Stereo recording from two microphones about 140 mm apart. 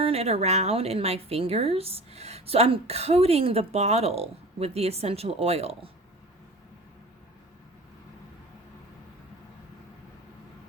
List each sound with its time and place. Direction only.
0.0 s a woman's voice: 45° right (ahead or behind)